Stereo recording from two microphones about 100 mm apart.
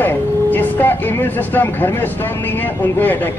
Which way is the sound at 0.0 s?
20° left (ahead or behind).